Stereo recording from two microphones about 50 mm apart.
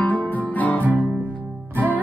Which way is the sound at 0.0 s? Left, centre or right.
Left.